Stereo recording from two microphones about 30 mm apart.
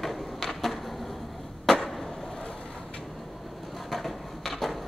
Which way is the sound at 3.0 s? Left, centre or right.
Centre.